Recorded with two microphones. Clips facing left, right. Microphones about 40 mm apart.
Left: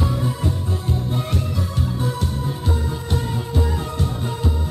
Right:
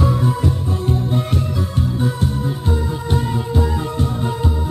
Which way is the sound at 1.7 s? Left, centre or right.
Centre.